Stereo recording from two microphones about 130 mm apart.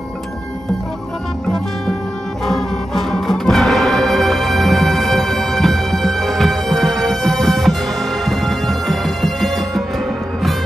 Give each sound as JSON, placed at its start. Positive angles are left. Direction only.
{"t": 2.4, "sound": "music", "side_deg": 0}